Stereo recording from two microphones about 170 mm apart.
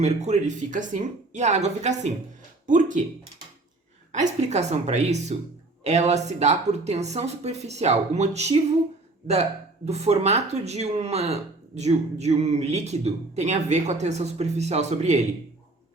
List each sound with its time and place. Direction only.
0.0 s speech: 40° right (ahead or behind)
4.1 s speech: 45° right (ahead or behind)